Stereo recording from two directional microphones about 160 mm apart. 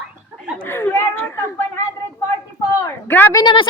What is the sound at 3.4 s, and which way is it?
Speech, 25° left (ahead or behind).